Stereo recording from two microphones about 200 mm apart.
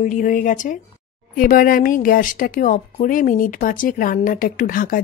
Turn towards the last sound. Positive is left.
turn(degrees=45)  # may be behind; listen again after turning